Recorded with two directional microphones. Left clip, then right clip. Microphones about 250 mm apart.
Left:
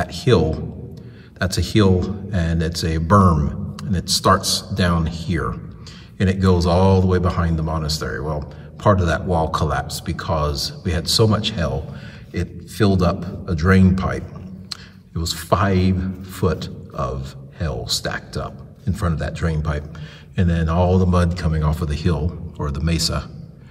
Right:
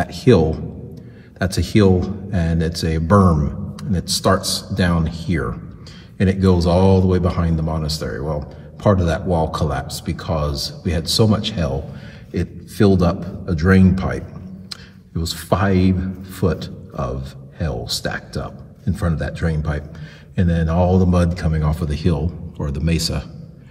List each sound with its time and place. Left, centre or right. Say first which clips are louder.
0.0 s a man's voice: right 3 dB; centre